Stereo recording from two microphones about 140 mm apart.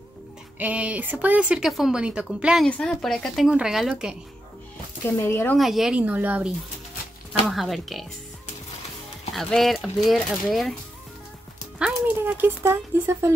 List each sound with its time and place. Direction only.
0.6 s speech: 10° right (ahead or behind)
5.2 s speech: 15° left (ahead or behind)
5.6 s speech: 5° right (ahead or behind)
9.3 s speech: centre (ahead or behind)
11.8 s speech: 10° right (ahead or behind)